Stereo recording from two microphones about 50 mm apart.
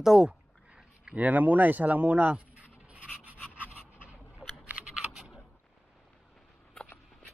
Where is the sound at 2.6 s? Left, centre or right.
Right.